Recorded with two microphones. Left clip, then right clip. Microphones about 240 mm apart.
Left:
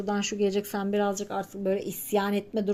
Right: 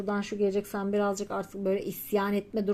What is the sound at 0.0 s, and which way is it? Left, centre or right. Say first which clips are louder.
Speech: left 2 dB; centre.